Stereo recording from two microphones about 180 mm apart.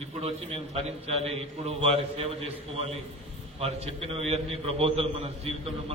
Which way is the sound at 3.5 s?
35° right (ahead or behind).